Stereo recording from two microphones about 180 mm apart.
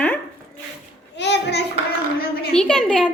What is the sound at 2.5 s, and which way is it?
Speech, 5° left (ahead or behind).